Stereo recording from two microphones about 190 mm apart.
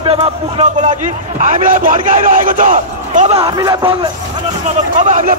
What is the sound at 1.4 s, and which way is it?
Speech, 45° right (ahead or behind).